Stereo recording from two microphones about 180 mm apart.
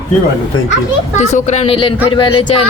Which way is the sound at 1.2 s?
40° left (ahead or behind).